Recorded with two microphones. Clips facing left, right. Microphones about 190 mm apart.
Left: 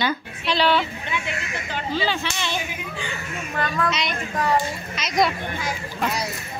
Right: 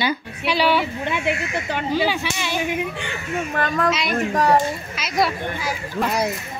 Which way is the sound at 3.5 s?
45° right (ahead or behind).